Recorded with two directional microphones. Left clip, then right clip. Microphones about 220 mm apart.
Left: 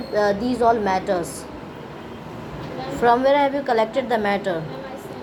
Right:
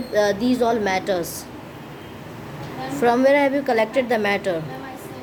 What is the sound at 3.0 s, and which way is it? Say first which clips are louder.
A woman's voice: even; 20° right (ahead or behind).